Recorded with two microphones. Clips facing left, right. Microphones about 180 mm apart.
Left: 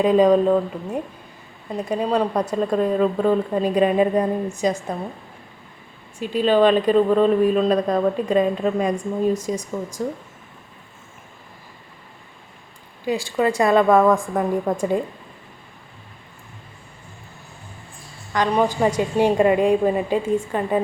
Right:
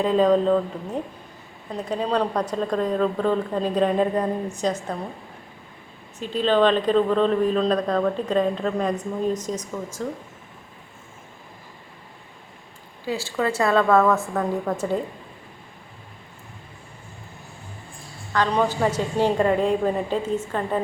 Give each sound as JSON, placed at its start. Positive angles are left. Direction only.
{"t": 0.0, "sound": "speech", "side_deg": 15}
{"t": 6.1, "sound": "speech", "side_deg": 10}
{"t": 13.1, "sound": "speech", "side_deg": 15}
{"t": 18.3, "sound": "speech", "side_deg": 15}